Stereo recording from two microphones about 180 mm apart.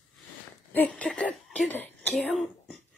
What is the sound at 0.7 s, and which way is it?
Cough, 5° left (ahead or behind).